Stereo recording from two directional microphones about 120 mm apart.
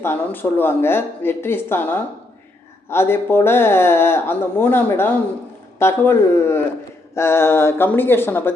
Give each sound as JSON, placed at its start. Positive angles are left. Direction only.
{"t": 0.0, "sound": "speech", "side_deg": 15}